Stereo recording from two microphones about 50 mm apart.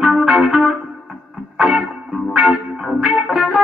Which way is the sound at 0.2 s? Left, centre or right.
Centre.